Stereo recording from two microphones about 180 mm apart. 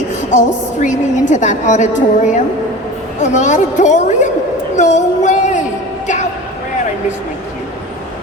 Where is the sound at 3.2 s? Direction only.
40° left (ahead or behind).